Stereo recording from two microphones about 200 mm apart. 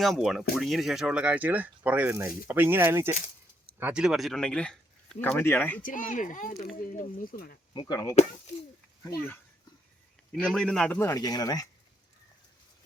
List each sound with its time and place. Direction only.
0.0 s speech: centre (ahead or behind)
5.8 s speech: 40° left (ahead or behind)
7.7 s a man's voice: 20° left (ahead or behind)
10.4 s a man's voice: 5° left (ahead or behind)